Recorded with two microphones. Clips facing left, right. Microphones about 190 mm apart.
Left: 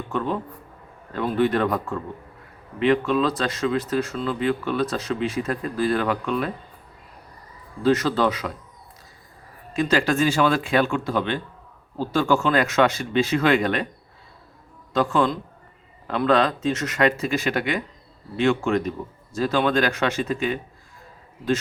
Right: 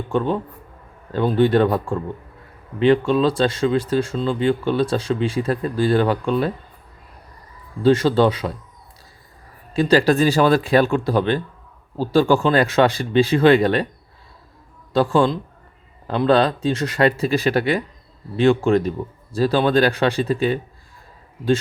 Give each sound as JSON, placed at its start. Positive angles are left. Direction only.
{"t": 0.1, "sound": "a man's voice", "side_deg": -30}
{"t": 7.8, "sound": "speech", "side_deg": -30}
{"t": 9.7, "sound": "a man's voice", "side_deg": -35}
{"t": 14.9, "sound": "a man's voice", "side_deg": -30}